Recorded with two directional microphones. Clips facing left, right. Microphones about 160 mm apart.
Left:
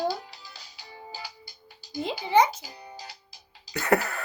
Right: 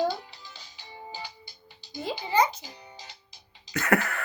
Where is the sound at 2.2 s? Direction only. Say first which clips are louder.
Left 3 dB; 10° left (ahead or behind).